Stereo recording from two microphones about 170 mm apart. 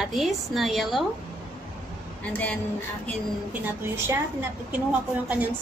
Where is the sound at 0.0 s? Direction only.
Centre (ahead or behind).